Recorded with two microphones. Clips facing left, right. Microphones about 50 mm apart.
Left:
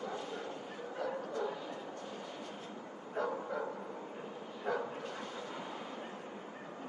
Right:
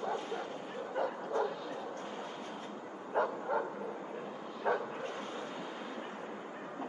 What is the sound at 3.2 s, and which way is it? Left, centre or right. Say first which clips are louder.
Bow-wow: right 4 dB; right.